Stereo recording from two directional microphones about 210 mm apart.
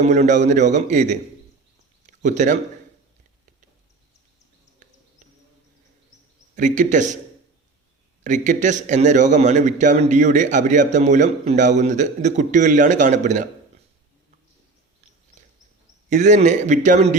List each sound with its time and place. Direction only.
0.0 s a man's voice: 35° right (ahead or behind)
6.6 s a man's voice: 35° right (ahead or behind)
8.2 s a man's voice: 35° right (ahead or behind)
16.0 s a man's voice: 35° right (ahead or behind)